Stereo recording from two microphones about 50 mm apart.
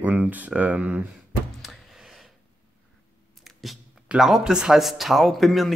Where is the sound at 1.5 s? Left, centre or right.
Centre.